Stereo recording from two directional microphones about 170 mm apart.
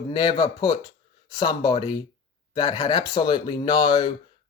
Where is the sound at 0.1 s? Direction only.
25° left (ahead or behind).